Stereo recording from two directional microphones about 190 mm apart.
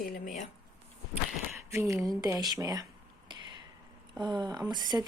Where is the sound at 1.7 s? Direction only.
15° right (ahead or behind).